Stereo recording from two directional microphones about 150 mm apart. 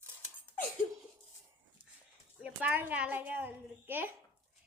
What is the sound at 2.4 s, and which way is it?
A child's voice, 10° right (ahead or behind).